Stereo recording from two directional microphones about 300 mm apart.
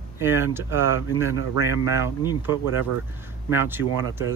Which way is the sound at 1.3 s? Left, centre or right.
Left.